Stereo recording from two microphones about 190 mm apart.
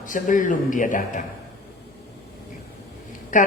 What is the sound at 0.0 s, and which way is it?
A man's voice, 45° left (ahead or behind).